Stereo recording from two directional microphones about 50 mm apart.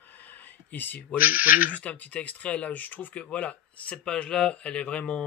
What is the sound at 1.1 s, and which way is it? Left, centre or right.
Speech, right.